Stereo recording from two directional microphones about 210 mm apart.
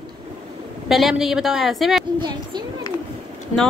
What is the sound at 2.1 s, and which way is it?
Speech, 20° right (ahead or behind).